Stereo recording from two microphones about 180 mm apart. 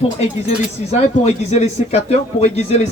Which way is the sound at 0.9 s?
35° left (ahead or behind).